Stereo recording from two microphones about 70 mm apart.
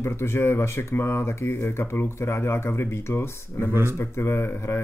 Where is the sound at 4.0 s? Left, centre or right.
Left.